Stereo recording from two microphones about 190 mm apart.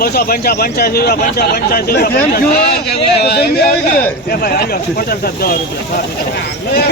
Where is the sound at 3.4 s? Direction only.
55° left (ahead or behind).